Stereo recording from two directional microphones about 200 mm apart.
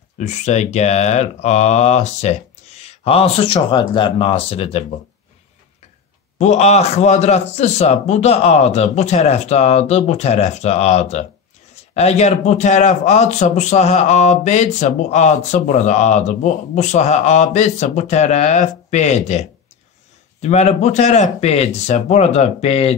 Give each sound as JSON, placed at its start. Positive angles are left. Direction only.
{"t": 0.2, "sound": "a man's voice", "side_deg": 35}
{"t": 6.3, "sound": "a man's voice", "side_deg": 35}
{"t": 20.4, "sound": "a man's voice", "side_deg": 35}